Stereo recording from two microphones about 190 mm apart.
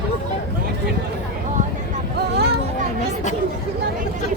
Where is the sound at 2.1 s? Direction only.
60° right (ahead or behind).